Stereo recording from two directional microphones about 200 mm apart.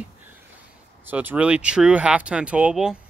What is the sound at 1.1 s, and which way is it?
Speech, 10° right (ahead or behind).